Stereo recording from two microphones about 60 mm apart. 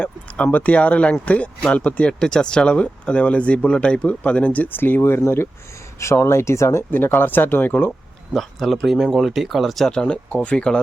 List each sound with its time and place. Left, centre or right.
0.0 s speech: left
6.9 s speech: left
8.3 s speech: centre
9.9 s speech: centre